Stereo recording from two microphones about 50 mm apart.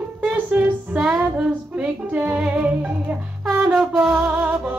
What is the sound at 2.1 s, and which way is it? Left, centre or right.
Music, right.